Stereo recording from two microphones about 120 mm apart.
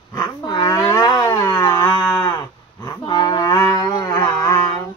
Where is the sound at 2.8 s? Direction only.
35° left (ahead or behind).